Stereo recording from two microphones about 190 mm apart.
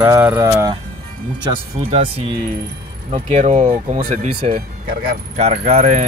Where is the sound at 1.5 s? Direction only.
30° right (ahead or behind).